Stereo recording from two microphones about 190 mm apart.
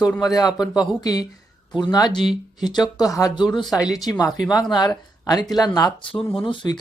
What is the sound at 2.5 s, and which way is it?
Speech, 20° left (ahead or behind).